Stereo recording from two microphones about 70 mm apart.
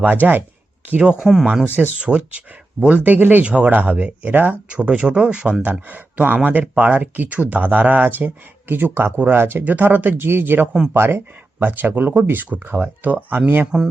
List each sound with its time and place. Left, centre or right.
0.0 s speech: right
1.0 s speech: centre
1.6 s speech: right